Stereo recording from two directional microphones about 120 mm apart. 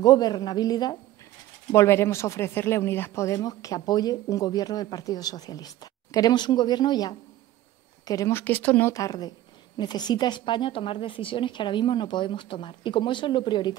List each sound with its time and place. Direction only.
0.0 s speech: 35° left (ahead or behind)
1.7 s speech: 20° left (ahead or behind)
8.1 s speech: 25° left (ahead or behind)
8.9 s a woman's voice: 30° left (ahead or behind)